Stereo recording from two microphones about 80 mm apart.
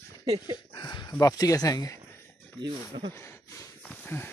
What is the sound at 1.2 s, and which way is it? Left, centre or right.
Speech, left.